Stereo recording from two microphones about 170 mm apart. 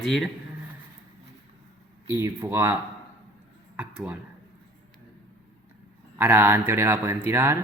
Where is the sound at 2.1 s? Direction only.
15° right (ahead or behind).